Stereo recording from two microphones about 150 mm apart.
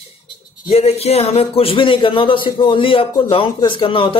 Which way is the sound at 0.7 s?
45° left (ahead or behind).